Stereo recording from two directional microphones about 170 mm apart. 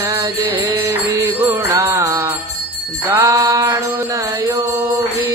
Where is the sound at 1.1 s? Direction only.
20° right (ahead or behind).